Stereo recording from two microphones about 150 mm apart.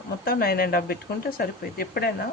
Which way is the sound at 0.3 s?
90° left.